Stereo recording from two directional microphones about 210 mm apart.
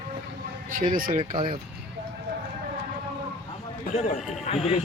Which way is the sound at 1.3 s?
25° right (ahead or behind).